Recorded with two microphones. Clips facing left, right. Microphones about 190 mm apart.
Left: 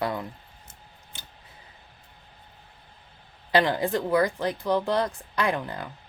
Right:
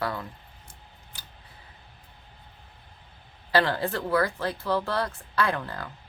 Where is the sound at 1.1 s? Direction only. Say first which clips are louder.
Left 2 dB; 25° left (ahead or behind).